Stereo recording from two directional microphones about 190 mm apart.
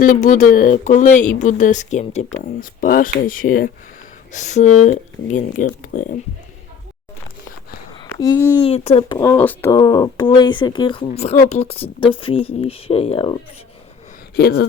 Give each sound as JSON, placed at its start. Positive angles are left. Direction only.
{"t": 0.0, "sound": "speech", "side_deg": 40}
{"t": 8.6, "sound": "speech", "side_deg": 35}
{"t": 9.1, "sound": "speech", "side_deg": 10}
{"t": 14.3, "sound": "speech", "side_deg": 60}